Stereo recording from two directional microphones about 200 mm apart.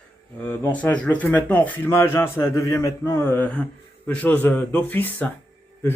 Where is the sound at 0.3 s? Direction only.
10° left (ahead or behind).